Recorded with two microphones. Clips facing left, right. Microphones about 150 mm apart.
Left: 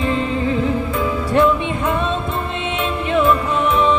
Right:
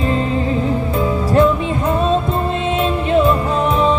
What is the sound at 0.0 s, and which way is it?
Music, 35° right (ahead or behind).